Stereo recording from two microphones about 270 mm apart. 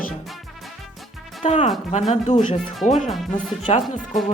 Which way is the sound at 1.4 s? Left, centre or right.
Left.